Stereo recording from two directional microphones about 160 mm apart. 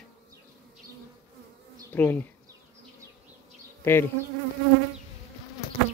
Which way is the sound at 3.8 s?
15° left (ahead or behind).